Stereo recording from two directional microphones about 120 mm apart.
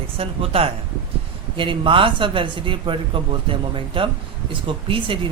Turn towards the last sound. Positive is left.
turn(degrees=-45)  # may be behind; listen again after turning